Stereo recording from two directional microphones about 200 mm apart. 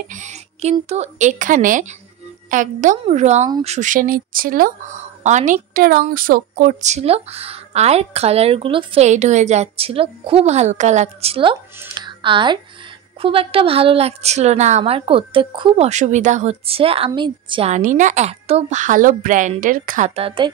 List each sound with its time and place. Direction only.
0.1 s a woman's voice: 35° right (ahead or behind)
15.9 s speech: 35° right (ahead or behind)